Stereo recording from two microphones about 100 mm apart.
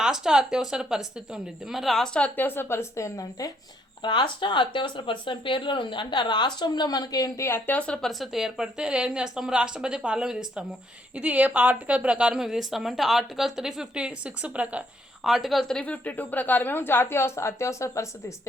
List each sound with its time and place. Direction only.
0.0 s a woman's voice: 5° right (ahead or behind)
2.1 s a woman's voice: 15° left (ahead or behind); by 3.5 s 35° left (ahead or behind)
4.0 s speech: 55° left (ahead or behind); by 7.6 s 30° left (ahead or behind)
7.7 s speech: 15° left (ahead or behind)
8.0 s a woman's voice: centre (ahead or behind)
15.3 s a woman's voice: centre (ahead or behind); by 18.1 s 30° left (ahead or behind)